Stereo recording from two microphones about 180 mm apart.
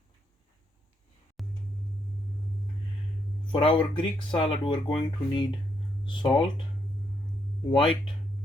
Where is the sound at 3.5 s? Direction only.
25° left (ahead or behind).